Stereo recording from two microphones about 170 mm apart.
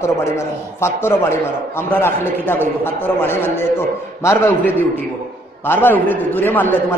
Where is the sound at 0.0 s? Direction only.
15° left (ahead or behind).